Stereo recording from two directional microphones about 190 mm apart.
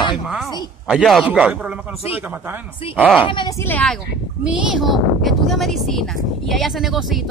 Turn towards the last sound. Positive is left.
turn(degrees=0)  # may be behind; listen again after turning